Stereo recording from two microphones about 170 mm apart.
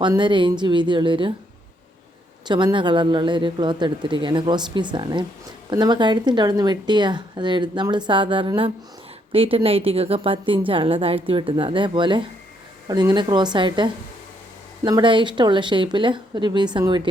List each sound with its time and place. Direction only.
0.0 s speech: 25° right (ahead or behind)
2.5 s a woman's voice: 25° right (ahead or behind)